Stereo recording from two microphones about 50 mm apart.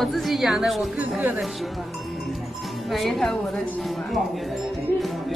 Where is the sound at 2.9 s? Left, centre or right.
Centre.